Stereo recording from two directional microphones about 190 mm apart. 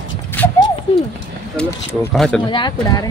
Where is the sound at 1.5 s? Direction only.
5° left (ahead or behind).